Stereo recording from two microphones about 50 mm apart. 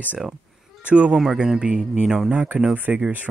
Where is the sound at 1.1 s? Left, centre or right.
Centre.